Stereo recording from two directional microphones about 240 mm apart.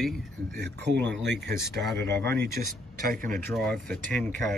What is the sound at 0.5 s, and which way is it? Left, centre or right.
Speech, right.